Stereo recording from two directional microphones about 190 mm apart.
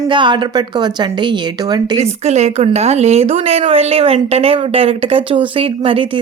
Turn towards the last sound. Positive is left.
turn(degrees=-30)  # may be behind; listen again after turning